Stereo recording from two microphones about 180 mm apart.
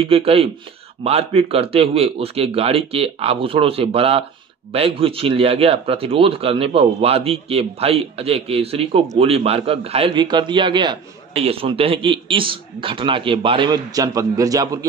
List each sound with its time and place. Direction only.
0.0 s a man's voice: 30° right (ahead or behind)